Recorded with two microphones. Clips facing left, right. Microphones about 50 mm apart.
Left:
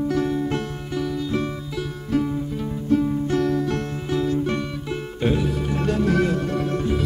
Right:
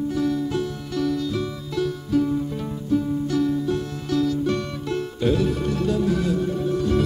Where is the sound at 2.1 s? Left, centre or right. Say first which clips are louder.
Right 1 dB; left.